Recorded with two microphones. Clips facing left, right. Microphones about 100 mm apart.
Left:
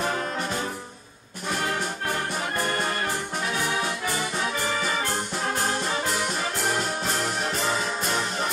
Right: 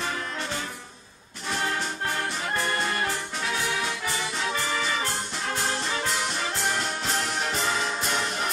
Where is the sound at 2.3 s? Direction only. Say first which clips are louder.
Left 1 dB; 50° left (ahead or behind).